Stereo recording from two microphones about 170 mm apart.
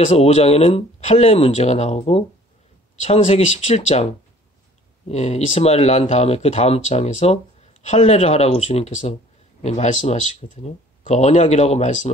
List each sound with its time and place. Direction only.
0.0 s speech: 40° left (ahead or behind)